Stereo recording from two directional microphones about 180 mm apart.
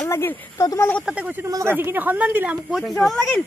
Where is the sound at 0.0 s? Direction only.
15° left (ahead or behind).